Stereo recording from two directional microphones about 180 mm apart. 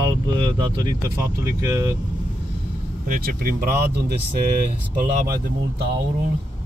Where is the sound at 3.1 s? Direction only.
55° right (ahead or behind).